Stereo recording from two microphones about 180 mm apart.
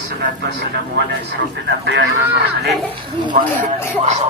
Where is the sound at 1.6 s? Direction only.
80° right.